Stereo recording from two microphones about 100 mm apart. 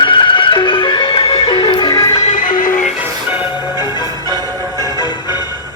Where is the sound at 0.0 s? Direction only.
55° left (ahead or behind).